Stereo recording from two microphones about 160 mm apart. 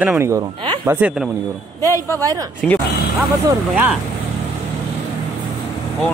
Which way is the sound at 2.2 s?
20° right (ahead or behind).